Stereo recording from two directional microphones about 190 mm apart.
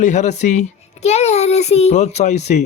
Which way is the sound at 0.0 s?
40° left (ahead or behind).